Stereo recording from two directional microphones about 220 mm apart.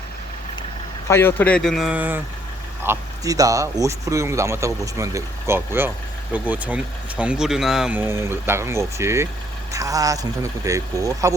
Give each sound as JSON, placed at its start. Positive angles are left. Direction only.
{"t": 1.0, "sound": "speech", "side_deg": 10}